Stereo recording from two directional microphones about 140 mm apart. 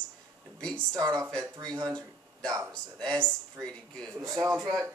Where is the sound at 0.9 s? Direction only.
25° right (ahead or behind).